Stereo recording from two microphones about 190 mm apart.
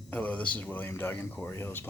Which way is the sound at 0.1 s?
5° left (ahead or behind).